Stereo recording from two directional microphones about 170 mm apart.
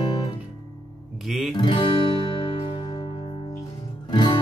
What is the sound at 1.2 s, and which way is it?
Speech, centre (ahead or behind).